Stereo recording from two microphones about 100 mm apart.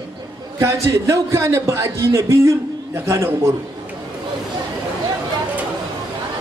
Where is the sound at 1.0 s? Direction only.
25° right (ahead or behind).